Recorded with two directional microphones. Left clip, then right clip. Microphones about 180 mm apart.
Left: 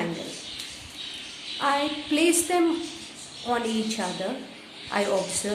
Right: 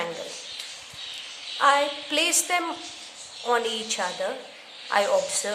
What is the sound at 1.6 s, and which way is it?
A woman's voice, 30° right (ahead or behind).